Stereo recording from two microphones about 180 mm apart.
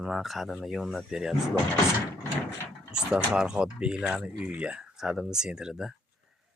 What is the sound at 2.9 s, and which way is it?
Speech, 5° right (ahead or behind).